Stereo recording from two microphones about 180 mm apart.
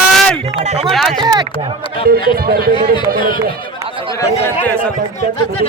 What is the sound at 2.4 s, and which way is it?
Speech, 55° right (ahead or behind).